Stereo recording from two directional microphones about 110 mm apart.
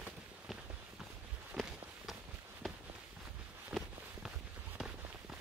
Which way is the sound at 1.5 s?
5° right (ahead or behind).